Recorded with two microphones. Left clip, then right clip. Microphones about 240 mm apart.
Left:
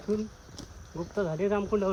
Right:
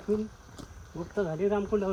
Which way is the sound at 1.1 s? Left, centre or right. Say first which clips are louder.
Even; centre.